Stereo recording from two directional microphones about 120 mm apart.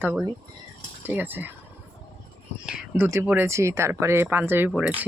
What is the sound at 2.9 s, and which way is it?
Speech, 15° right (ahead or behind).